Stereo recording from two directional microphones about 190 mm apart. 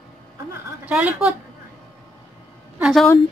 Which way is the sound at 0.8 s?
5° right (ahead or behind).